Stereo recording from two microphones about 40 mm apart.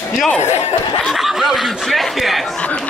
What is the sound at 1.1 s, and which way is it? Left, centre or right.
Speech, centre.